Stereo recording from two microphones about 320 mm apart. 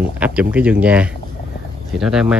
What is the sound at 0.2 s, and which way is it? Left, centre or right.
Speech, centre.